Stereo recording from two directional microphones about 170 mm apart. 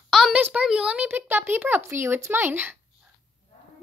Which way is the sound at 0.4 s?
5° right (ahead or behind).